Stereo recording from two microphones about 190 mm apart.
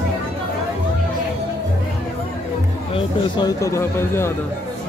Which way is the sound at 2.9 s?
20° left (ahead or behind).